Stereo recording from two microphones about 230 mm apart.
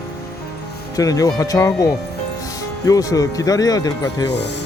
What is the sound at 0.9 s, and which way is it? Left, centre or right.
Speech, centre.